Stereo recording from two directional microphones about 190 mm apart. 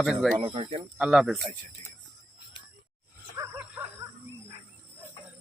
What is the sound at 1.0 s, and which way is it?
Speech, 5° right (ahead or behind).